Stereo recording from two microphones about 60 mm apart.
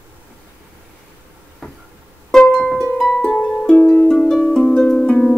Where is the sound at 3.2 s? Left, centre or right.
Left; by 4.4 s centre.